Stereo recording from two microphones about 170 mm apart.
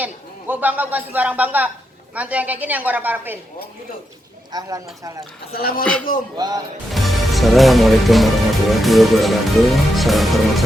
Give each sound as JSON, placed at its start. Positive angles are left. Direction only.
{"t": 0.0, "sound": "a woman's voice", "side_deg": -10}
{"t": 4.5, "sound": "speech", "side_deg": -25}
{"t": 5.5, "sound": "a man's voice", "side_deg": 60}
{"t": 5.8, "sound": "speech", "side_deg": 5}
{"t": 6.3, "sound": "speech", "side_deg": -25}
{"t": 6.9, "sound": "speech", "side_deg": 0}